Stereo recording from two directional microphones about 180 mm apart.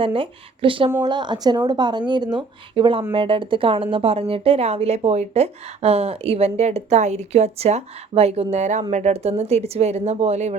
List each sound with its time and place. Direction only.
0.0 s speech: 30° right (ahead or behind)